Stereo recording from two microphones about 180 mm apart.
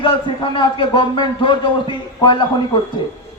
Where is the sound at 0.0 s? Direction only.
25° left (ahead or behind).